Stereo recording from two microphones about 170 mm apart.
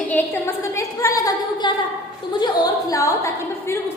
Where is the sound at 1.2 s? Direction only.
25° left (ahead or behind).